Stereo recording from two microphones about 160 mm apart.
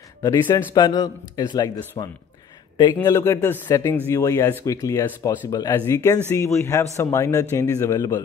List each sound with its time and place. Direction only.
0.2 s a man's voice: 25° left (ahead or behind)
3.2 s a man's voice: 15° left (ahead or behind)